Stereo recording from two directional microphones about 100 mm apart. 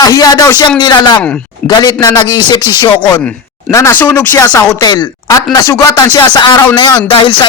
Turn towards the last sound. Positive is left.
turn(degrees=55)  # may be behind; listen again after turning